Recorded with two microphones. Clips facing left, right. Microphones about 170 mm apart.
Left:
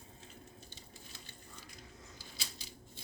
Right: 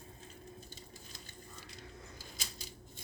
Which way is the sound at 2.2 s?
45° right (ahead or behind).